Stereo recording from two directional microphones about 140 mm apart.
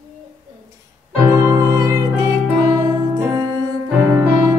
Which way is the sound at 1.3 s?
25° right (ahead or behind).